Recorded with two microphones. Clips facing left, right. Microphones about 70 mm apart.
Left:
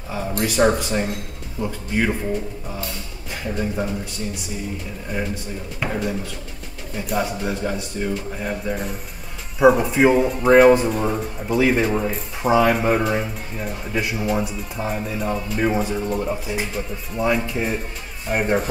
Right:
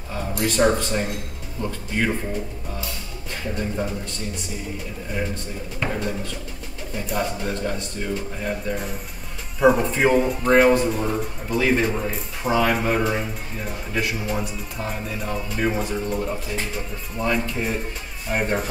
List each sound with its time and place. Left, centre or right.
0.4 s speech: centre
3.5 s speech: centre
5.1 s speech: centre